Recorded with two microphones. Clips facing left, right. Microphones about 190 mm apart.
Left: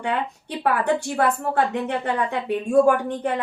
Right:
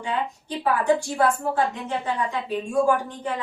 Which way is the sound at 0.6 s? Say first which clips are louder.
Even; 60° left (ahead or behind).